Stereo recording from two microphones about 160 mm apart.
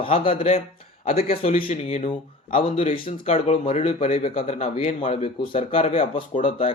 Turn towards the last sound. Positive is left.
turn(degrees=35)  # may be behind; listen again after turning